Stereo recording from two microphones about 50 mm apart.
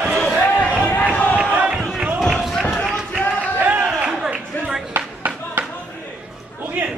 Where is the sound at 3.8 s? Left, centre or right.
Centre.